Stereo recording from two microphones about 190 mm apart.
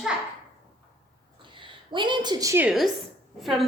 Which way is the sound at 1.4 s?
25° right (ahead or behind).